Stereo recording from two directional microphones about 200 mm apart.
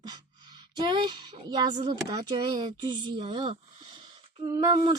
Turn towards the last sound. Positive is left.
turn(degrees=-20)  # may be behind; listen again after turning